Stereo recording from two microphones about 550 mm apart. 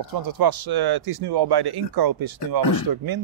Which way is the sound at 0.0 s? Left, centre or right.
Right.